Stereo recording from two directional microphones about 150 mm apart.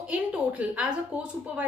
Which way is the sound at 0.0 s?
10° right (ahead or behind).